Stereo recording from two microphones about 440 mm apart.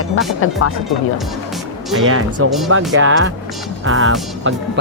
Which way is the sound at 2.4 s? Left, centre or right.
Right.